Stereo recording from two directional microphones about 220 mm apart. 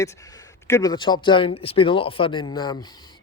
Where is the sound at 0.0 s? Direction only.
15° left (ahead or behind).